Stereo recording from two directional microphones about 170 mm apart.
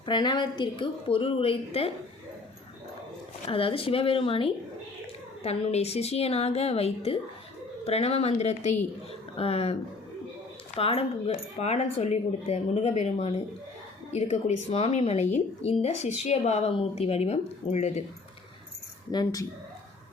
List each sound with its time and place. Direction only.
0.0 s a woman's voice: 25° left (ahead or behind)
3.4 s speech: 35° left (ahead or behind)
10.8 s speech: 35° left (ahead or behind)
19.1 s a woman's voice: 20° left (ahead or behind)